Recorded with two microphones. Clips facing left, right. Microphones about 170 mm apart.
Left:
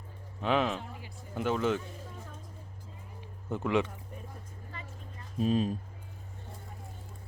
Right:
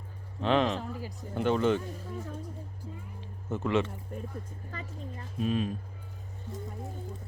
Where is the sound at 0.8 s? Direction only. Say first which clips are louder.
Right 7 dB; 40° right (ahead or behind).